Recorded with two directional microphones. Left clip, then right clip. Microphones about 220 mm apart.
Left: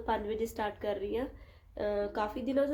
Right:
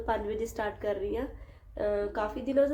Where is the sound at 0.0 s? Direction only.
5° left (ahead or behind).